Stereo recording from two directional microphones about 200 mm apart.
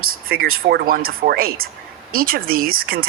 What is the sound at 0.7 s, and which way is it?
Speech, 45° right (ahead or behind).